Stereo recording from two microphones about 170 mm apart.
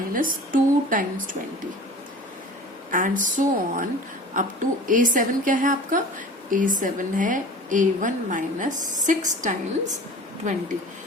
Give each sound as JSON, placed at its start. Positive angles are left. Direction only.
{"t": 0.5, "sound": "a woman's voice", "side_deg": -50}
{"t": 2.9, "sound": "a woman's voice", "side_deg": -50}